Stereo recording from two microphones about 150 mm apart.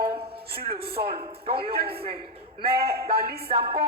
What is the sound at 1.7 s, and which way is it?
Speech, 90° right.